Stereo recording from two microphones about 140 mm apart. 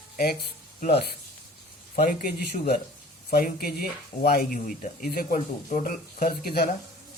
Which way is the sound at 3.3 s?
90° left.